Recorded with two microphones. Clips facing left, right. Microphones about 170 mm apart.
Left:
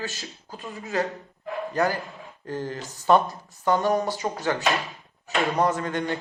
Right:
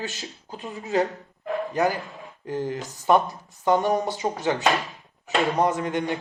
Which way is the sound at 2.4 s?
20° right (ahead or behind).